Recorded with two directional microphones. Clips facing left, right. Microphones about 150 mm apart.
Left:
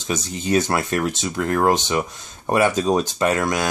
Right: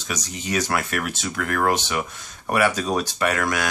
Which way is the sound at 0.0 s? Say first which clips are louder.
Left 5 dB; 25° left (ahead or behind).